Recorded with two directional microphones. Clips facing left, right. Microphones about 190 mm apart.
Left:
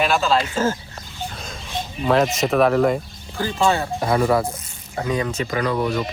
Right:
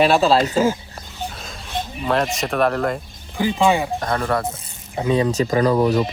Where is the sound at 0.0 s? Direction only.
35° right (ahead or behind).